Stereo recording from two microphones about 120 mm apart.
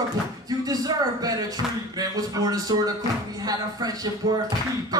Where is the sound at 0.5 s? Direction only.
30° right (ahead or behind).